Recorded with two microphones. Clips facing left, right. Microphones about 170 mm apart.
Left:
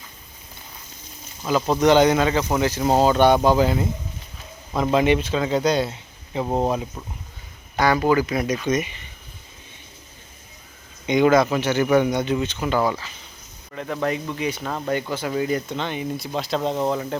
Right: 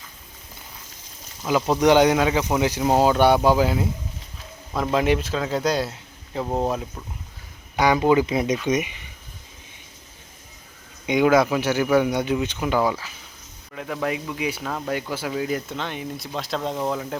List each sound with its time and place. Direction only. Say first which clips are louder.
1.5 s a man's voice: even; 10° right (ahead or behind)
6.4 s speech: left 2 dB; 15° left (ahead or behind)
7.8 s speech: right 1 dB; 15° right (ahead or behind)
11.0 s speech: left 1 dB; 10° right (ahead or behind)